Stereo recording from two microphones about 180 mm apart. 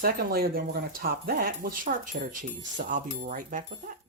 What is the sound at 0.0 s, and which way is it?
Speech, 55° right (ahead or behind).